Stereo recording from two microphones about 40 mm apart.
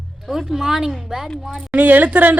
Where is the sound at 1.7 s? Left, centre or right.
Right.